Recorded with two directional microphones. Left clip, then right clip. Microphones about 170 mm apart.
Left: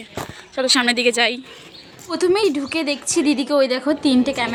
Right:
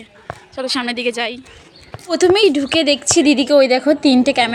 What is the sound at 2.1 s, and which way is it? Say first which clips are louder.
A woman's voice: right 5 dB; 15° right (ahead or behind).